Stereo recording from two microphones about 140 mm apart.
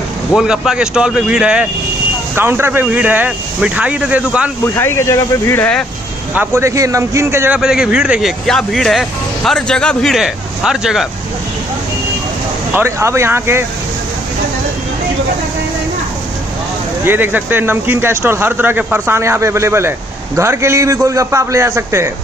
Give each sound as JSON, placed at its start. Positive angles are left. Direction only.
{"t": 0.4, "sound": "a man's voice", "side_deg": -5}
{"t": 4.7, "sound": "speech", "side_deg": 20}
{"t": 6.3, "sound": "a man's voice", "side_deg": -15}
{"t": 12.7, "sound": "speech", "side_deg": -20}
{"t": 17.0, "sound": "a man's voice", "side_deg": -15}